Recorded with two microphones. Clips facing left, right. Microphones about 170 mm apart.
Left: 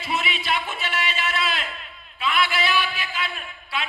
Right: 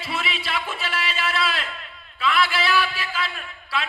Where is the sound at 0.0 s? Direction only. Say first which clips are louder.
Left 1 dB; 30° right (ahead or behind).